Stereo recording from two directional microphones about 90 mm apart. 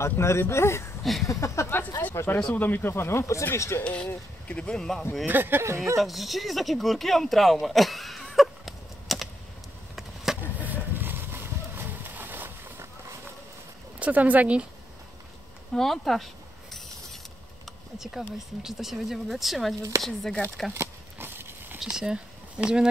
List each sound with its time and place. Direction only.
0.0 s speech: 30° left (ahead or behind)
2.0 s speech: 20° left (ahead or behind)
3.8 s speech: 10° left (ahead or behind)
5.2 s speech: 20° right (ahead or behind)
5.9 s speech: centre (ahead or behind)
8.4 s a sound: centre (ahead or behind)
9.9 s vehicle: 5° right (ahead or behind)
10.6 s horse: 20° right (ahead or behind)
13.9 s speech: 15° right (ahead or behind)
15.7 s speech: 5° left (ahead or behind)
17.9 s speech: 5° right (ahead or behind)
20.7 s a sound: 25° right (ahead or behind)
21.7 s speech: 5° right (ahead or behind)